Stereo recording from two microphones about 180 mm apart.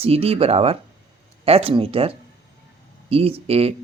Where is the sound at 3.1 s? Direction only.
30° right (ahead or behind).